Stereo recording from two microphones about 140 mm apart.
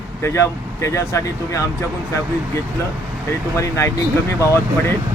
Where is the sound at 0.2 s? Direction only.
20° left (ahead or behind).